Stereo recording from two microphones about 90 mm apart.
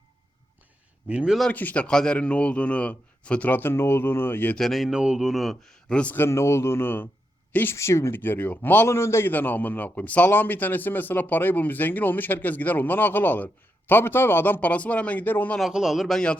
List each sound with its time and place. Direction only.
1.0 s speech: 10° right (ahead or behind)
1.5 s a man's voice: 15° left (ahead or behind)
4.5 s a man's voice: 5° left (ahead or behind)
6.1 s speech: 30° left (ahead or behind)
15.7 s a man's voice: 5° right (ahead or behind)